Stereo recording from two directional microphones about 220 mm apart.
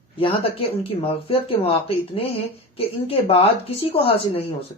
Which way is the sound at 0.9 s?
25° left (ahead or behind).